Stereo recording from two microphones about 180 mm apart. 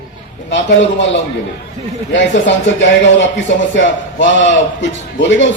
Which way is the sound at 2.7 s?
90° left.